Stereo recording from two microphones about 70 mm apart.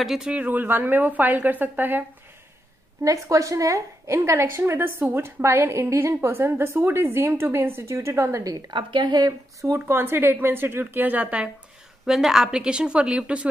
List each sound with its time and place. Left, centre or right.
0.0 s speech: centre
0.3 s a woman's voice: right
3.0 s a woman's voice: right
4.2 s a woman's voice: right
8.5 s a woman's voice: right
9.8 s a woman's voice: right
12.0 s a woman's voice: centre